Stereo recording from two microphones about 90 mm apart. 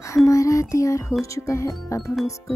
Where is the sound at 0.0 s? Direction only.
35° left (ahead or behind).